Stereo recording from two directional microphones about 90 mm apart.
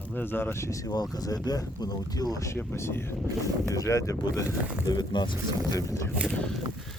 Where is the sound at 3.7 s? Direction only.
35° left (ahead or behind).